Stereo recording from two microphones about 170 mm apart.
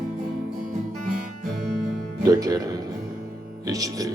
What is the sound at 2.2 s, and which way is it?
Music, 25° right (ahead or behind).